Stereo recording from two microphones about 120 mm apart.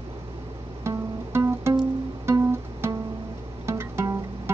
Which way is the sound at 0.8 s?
25° right (ahead or behind).